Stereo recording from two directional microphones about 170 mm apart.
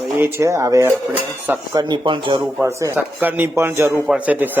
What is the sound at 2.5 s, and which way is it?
Speech, 15° right (ahead or behind).